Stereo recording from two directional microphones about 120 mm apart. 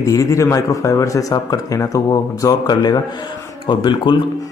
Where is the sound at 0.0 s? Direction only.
25° left (ahead or behind).